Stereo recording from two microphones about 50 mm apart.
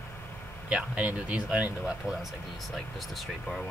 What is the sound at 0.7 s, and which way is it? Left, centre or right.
Speech, right.